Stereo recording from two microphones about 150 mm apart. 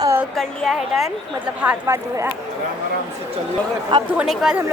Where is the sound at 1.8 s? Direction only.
20° right (ahead or behind).